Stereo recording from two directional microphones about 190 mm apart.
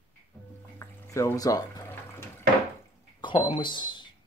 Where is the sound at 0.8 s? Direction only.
15° left (ahead or behind).